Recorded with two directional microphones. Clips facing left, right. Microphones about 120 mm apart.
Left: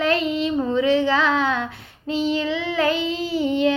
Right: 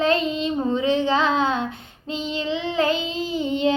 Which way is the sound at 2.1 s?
25° right (ahead or behind).